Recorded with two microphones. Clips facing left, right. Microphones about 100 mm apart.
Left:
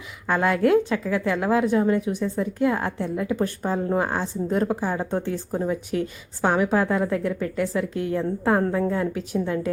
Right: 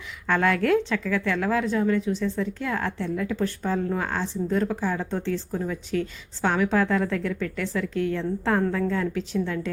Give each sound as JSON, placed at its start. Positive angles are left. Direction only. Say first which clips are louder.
{"t": 0.3, "sound": "a woman's voice", "louder": "left 2 dB", "side_deg": 10}